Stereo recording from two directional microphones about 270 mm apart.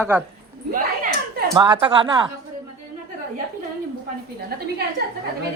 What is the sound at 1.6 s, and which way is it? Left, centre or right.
Speech, centre.